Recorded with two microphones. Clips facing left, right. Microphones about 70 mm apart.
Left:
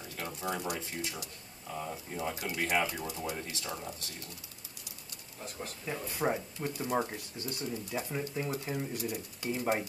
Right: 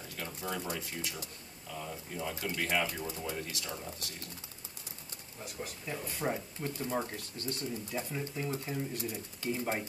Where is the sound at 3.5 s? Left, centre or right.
Left.